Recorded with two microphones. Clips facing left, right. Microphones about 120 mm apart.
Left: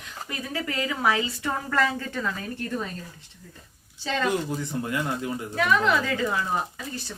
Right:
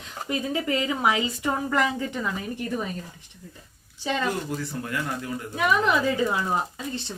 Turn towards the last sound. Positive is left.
turn(degrees=-20)  # may be behind; listen again after turning